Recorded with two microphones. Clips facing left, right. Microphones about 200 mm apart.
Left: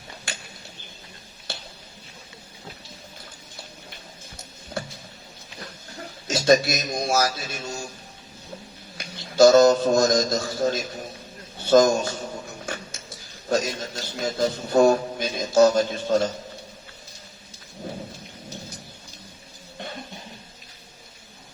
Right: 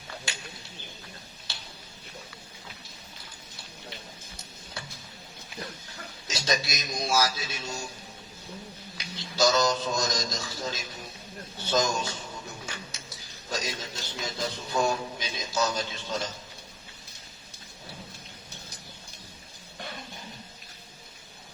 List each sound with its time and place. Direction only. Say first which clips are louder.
6.2 s a man's voice: left 12 dB; 50° left (ahead or behind)
9.0 s a man's voice: left 10 dB; 50° left (ahead or behind)
11.7 s music: left 10 dB; 50° left (ahead or behind)
13.5 s a man's voice: left 10 dB; 50° left (ahead or behind)